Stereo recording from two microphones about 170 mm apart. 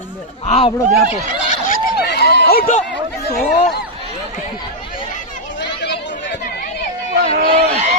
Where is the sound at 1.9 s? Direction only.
75° left (ahead or behind).